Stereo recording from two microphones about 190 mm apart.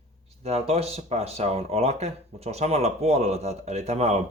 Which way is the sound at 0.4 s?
35° right (ahead or behind).